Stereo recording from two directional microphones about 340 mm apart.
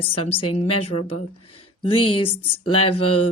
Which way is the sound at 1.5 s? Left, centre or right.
Centre.